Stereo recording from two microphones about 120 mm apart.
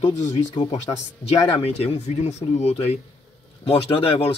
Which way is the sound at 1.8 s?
65° left (ahead or behind).